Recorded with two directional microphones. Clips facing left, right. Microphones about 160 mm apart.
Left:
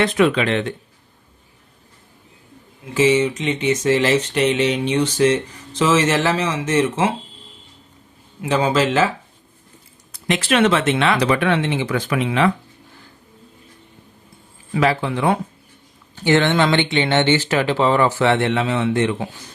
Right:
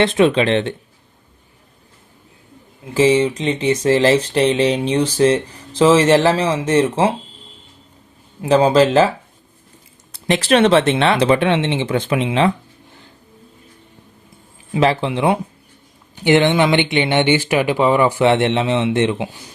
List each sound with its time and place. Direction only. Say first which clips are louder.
0.0 s speech: right 3 dB; 25° right (ahead or behind)
2.9 s speech: right 2 dB; 30° right (ahead or behind)
8.4 s speech: right 6 dB; 35° right (ahead or behind)
10.1 s speech: right 4 dB; 35° right (ahead or behind)
14.7 s speech: right 2 dB; 25° right (ahead or behind)